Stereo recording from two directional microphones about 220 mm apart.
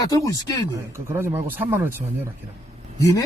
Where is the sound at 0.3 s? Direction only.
15° left (ahead or behind).